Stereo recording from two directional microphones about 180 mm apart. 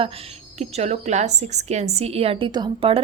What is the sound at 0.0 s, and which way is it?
A woman's voice, 30° right (ahead or behind).